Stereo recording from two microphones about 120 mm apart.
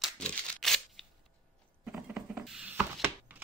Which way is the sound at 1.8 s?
5° right (ahead or behind).